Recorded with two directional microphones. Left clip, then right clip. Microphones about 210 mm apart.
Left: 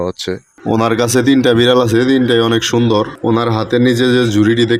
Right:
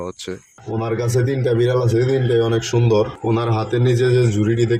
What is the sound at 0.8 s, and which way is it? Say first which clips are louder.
Speech: left 7 dB; 45° left (ahead or behind).